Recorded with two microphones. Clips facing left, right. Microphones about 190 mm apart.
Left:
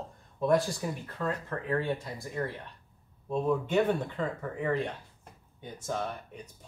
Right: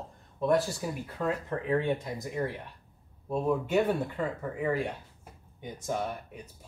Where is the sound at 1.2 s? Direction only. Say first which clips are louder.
Right 3 dB; 15° right (ahead or behind).